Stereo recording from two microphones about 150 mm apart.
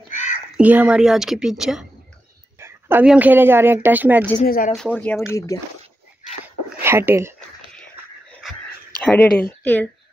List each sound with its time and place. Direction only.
0.1 s a sound: 55° left (ahead or behind)
0.6 s a woman's voice: 10° right (ahead or behind)
2.6 s a sound: 15° right (ahead or behind)
3.1 s speech: 10° right (ahead or behind)
4.4 s speech: 75° left (ahead or behind)
4.9 s speech: 10° left (ahead or behind)
5.5 s speech: 20° left (ahead or behind)
6.8 s speech: 15° right (ahead or behind)
9.0 s speech: 10° left (ahead or behind)